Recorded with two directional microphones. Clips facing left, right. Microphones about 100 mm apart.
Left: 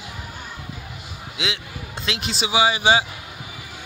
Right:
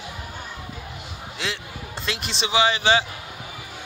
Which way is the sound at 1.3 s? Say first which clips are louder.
Left 2 dB; centre (ahead or behind).